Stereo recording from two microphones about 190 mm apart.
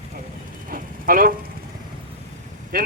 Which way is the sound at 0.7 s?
50° right (ahead or behind).